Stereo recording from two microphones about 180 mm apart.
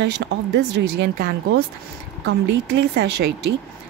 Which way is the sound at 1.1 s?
55° right (ahead or behind).